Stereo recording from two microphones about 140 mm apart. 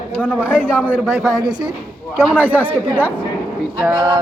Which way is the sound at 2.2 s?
15° right (ahead or behind).